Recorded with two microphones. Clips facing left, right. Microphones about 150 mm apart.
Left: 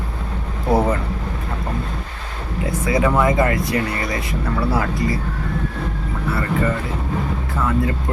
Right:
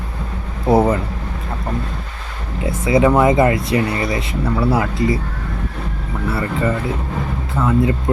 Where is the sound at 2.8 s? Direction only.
20° right (ahead or behind).